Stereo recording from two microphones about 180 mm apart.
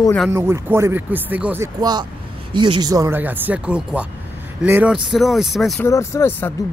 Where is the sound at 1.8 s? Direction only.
25° right (ahead or behind); by 5.8 s centre (ahead or behind).